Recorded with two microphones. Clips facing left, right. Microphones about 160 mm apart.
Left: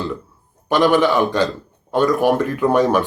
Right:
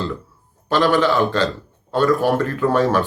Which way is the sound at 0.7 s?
15° left (ahead or behind).